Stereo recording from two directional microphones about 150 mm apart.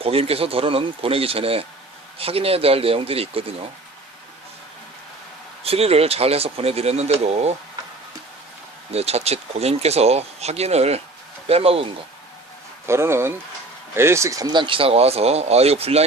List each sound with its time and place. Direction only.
0.0 s speech: 40° right (ahead or behind)
5.6 s speech: 40° right (ahead or behind)
8.9 s speech: 45° right (ahead or behind)
12.8 s speech: 15° right (ahead or behind); by 16.0 s 40° right (ahead or behind)